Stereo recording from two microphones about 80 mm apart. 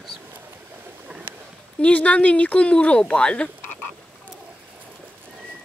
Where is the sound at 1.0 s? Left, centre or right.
Centre.